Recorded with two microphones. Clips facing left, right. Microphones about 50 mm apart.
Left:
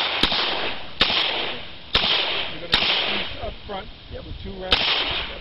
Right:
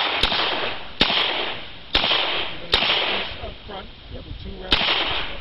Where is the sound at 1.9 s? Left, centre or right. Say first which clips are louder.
Right 1 dB; centre.